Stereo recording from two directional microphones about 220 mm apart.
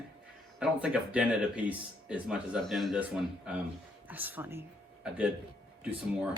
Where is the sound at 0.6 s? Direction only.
5° right (ahead or behind).